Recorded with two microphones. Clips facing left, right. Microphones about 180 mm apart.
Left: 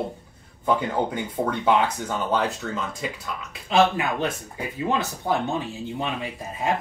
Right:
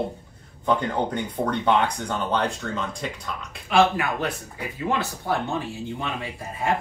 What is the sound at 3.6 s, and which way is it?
Speech, 20° left (ahead or behind).